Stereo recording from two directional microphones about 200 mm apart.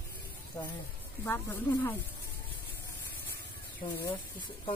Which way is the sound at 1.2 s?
10° left (ahead or behind).